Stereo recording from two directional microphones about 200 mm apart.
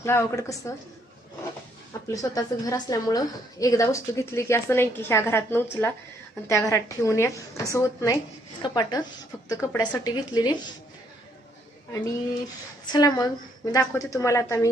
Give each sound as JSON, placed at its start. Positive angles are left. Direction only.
{"t": 0.0, "sound": "a woman's voice", "side_deg": 15}
{"t": 1.9, "sound": "a woman's voice", "side_deg": 15}
{"t": 12.8, "sound": "a woman's voice", "side_deg": 20}